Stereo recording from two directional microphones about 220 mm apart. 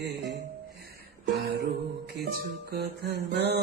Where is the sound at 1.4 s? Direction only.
55° right (ahead or behind).